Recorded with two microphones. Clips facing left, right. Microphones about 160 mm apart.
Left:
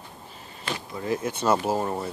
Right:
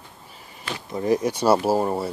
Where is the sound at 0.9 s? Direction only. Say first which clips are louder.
Right 7 dB; 35° right (ahead or behind).